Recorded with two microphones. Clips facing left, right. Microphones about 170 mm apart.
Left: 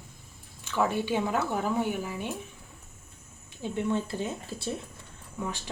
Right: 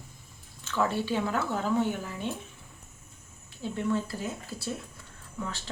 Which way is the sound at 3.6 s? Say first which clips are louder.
Even; 20° left (ahead or behind).